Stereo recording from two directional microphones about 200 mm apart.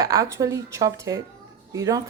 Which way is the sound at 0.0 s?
15° right (ahead or behind).